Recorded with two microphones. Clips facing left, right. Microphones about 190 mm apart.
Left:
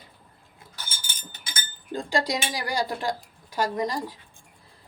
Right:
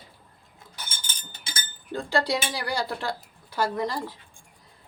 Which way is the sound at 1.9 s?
15° left (ahead or behind).